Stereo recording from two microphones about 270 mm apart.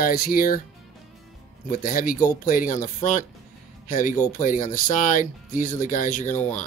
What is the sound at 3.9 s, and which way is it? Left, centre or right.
Speech, left.